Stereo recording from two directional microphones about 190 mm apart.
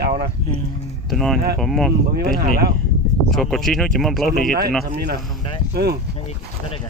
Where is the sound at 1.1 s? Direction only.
Centre (ahead or behind).